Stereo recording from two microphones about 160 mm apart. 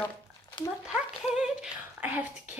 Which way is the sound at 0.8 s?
5° right (ahead or behind).